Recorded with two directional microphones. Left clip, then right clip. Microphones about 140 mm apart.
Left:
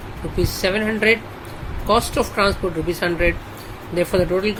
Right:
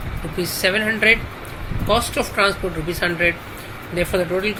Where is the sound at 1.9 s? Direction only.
85° left; by 3.3 s 70° left (ahead or behind).